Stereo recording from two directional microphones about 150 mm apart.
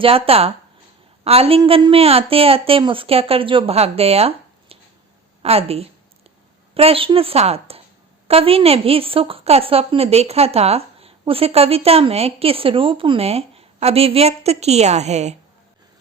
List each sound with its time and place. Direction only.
0.0 s a woman's voice: 40° right (ahead or behind)